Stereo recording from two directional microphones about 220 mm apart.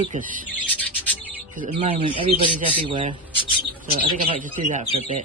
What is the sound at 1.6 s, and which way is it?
Speech, 30° right (ahead or behind).